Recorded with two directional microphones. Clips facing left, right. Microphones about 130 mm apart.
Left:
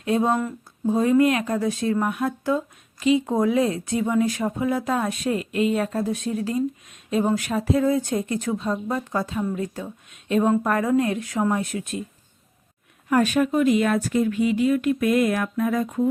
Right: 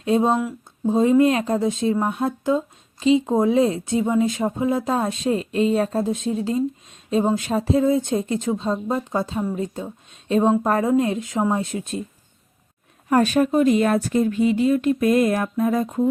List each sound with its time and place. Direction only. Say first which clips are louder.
0.0 s speech: right 2 dB; 25° right (ahead or behind)
13.1 s speech: right 2 dB; 35° right (ahead or behind)